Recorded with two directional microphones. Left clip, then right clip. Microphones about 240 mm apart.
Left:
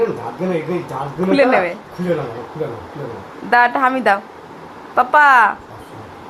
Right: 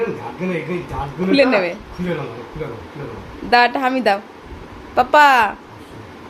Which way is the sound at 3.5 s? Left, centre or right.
Centre.